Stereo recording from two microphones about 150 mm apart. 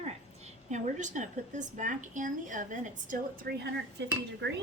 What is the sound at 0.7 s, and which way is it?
A woman's voice, 55° right (ahead or behind).